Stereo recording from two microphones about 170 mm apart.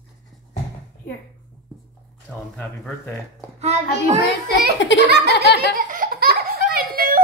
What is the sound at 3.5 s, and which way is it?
Speech, 40° right (ahead or behind).